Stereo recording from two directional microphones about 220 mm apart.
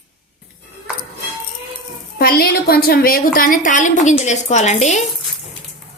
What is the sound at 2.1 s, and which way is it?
A woman's voice, 45° left (ahead or behind).